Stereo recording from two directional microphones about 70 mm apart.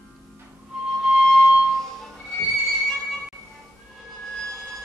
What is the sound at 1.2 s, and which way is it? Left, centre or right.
Music, centre.